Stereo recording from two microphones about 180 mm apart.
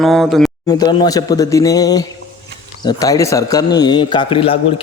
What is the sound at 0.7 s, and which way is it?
A man's voice, 25° left (ahead or behind).